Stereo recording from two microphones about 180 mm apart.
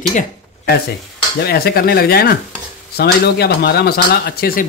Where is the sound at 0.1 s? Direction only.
45° left (ahead or behind).